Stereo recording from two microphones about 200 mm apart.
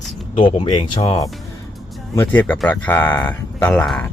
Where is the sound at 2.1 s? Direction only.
10° left (ahead or behind).